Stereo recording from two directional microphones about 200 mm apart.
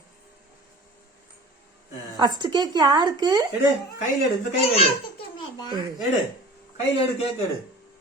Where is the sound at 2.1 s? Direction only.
20° right (ahead or behind).